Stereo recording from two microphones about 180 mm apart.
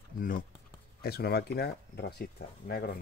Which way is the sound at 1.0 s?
60° left (ahead or behind).